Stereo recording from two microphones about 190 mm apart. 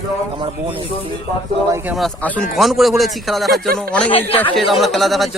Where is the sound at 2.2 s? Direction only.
10° left (ahead or behind).